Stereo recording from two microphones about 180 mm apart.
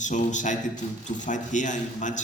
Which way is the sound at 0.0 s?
45° left (ahead or behind).